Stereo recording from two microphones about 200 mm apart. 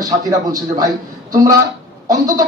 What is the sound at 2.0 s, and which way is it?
Speech, 20° right (ahead or behind).